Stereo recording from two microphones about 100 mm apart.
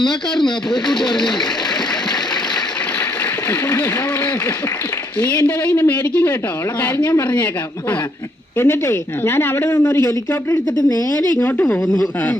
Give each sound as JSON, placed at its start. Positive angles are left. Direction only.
{"t": 0.0, "sound": "speech", "side_deg": 5}
{"t": 5.4, "sound": "a woman's voice", "side_deg": 15}
{"t": 8.5, "sound": "a woman's voice", "side_deg": 25}